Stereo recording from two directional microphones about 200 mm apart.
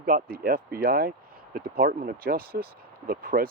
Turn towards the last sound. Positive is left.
turn(degrees=-45)  # may be behind; listen again after turning